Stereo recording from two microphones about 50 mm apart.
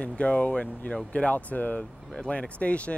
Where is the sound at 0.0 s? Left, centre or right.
Left.